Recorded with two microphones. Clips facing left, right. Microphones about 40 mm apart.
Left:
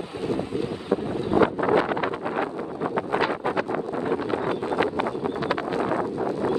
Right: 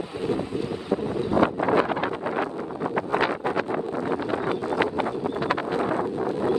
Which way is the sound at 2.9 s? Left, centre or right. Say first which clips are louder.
Right 1 dB; right.